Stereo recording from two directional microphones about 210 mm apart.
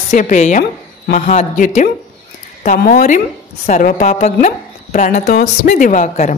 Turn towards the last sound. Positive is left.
turn(degrees=35)  # may be behind; listen again after turning